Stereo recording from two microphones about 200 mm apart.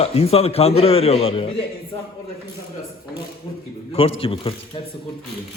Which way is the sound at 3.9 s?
30° left (ahead or behind).